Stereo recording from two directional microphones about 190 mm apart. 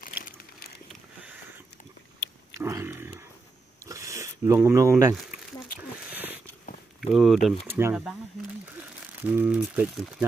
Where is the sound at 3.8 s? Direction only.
15° right (ahead or behind).